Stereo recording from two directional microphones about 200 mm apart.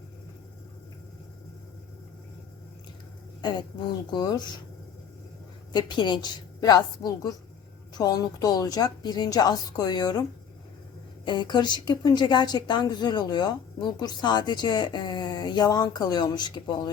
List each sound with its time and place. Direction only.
3.4 s a woman's voice: 20° left (ahead or behind)
5.7 s a woman's voice: 20° left (ahead or behind)
11.3 s a woman's voice: 20° left (ahead or behind)